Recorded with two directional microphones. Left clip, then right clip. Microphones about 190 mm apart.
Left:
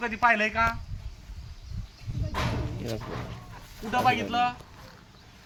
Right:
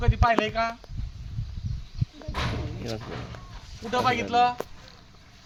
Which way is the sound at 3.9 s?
40° right (ahead or behind).